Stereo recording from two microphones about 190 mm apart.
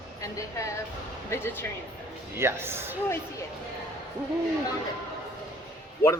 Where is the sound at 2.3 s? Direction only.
15° right (ahead or behind).